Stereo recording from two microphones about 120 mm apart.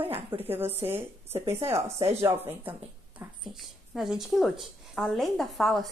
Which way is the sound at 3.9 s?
Centre (ahead or behind).